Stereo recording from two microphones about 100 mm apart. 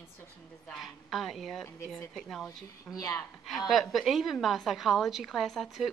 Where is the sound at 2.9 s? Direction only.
35° left (ahead or behind).